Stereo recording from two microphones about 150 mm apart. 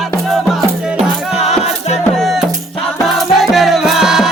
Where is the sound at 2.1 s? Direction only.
Centre (ahead or behind).